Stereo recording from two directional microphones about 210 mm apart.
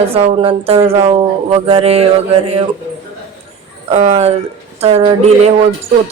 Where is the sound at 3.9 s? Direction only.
30° right (ahead or behind).